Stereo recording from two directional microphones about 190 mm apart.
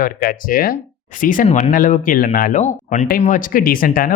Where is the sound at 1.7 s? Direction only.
45° left (ahead or behind).